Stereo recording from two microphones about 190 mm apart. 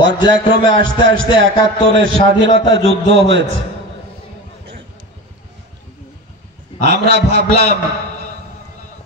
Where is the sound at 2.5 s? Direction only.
30° left (ahead or behind).